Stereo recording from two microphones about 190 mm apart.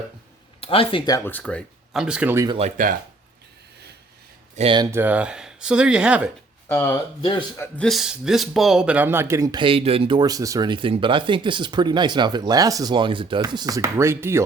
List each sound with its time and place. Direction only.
0.6 s speech: 30° left (ahead or behind); by 2.6 s 15° right (ahead or behind)
2.6 s speech: 40° right (ahead or behind)
4.5 s a man's voice: 30° right (ahead or behind)
4.9 s speech: 10° right (ahead or behind)
6.7 s speech: 10° left (ahead or behind)
7.2 s speech: 25° left (ahead or behind)
7.6 s a man's voice: 5° left (ahead or behind); by 14.4 s 15° right (ahead or behind)